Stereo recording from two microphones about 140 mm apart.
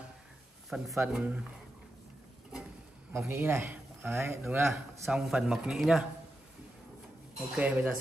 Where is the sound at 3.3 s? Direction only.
15° right (ahead or behind).